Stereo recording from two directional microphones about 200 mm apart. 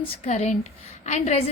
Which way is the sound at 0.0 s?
35° left (ahead or behind).